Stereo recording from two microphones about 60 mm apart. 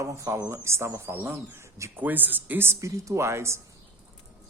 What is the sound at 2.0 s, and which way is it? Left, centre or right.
Speech, right.